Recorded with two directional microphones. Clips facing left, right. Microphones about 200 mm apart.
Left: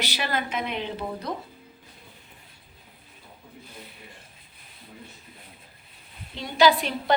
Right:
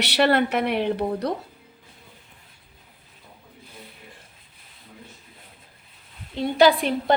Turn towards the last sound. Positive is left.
turn(degrees=-55)  # may be behind; listen again after turning